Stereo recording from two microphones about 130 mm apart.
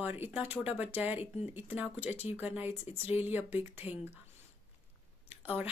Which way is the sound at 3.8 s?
45° left (ahead or behind).